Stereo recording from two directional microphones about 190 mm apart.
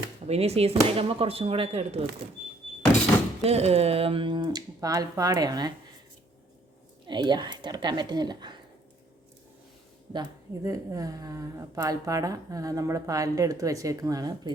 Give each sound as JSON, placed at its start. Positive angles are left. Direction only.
{"t": 0.3, "sound": "speech", "side_deg": -35}
{"t": 3.4, "sound": "speech", "side_deg": -35}
{"t": 7.1, "sound": "speech", "side_deg": -25}
{"t": 10.1, "sound": "a woman's voice", "side_deg": -20}